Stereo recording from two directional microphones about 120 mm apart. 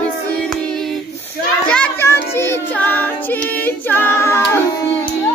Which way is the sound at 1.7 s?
10° left (ahead or behind).